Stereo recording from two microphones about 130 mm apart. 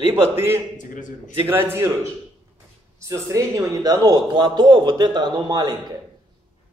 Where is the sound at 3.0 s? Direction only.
20° right (ahead or behind).